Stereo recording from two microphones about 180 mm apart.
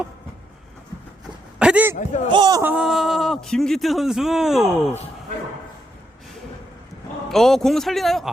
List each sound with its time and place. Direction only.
1.5 s a sound: 5° right (ahead or behind)
2.0 s a man's voice: 45° left (ahead or behind)
2.3 s speech: 25° right (ahead or behind)
2.6 s speech: 10° right (ahead or behind)
7.3 s speech: centre (ahead or behind)